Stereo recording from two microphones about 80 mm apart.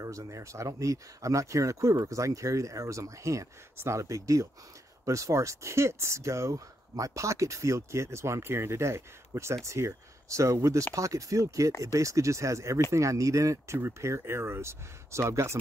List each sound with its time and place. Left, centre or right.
0.0 s speech: right